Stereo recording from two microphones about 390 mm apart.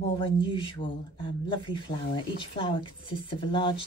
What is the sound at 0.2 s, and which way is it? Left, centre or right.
Speech, centre.